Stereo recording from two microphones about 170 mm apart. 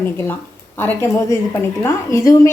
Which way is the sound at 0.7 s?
15° left (ahead or behind).